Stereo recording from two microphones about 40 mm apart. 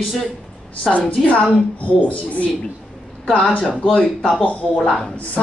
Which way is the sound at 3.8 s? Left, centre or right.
Left.